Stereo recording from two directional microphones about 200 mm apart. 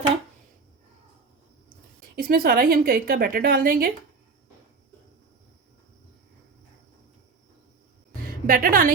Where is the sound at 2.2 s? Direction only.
45° right (ahead or behind).